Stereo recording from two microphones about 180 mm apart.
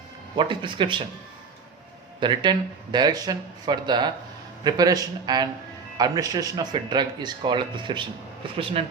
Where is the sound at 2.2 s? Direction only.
25° right (ahead or behind).